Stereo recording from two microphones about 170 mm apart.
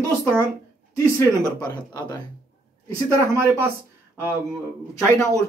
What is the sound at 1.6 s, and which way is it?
Speech, 20° left (ahead or behind).